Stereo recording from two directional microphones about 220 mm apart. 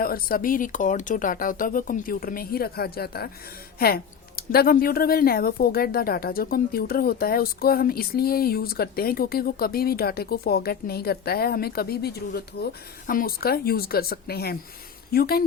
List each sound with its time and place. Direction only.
0.0 s a woman's voice: 40° left (ahead or behind)